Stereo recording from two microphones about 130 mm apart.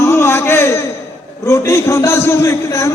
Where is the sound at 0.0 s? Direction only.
20° left (ahead or behind).